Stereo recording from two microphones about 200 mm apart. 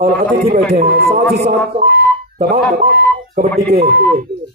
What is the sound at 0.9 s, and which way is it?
Speech, 50° right (ahead or behind).